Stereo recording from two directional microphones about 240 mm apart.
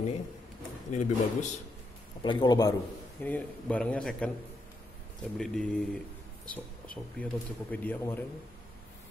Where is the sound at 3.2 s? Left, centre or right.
Centre.